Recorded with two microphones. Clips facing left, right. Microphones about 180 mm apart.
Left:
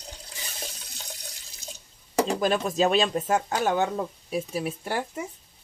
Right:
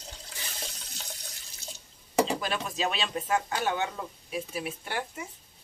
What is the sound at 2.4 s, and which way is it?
Speech, 40° left (ahead or behind).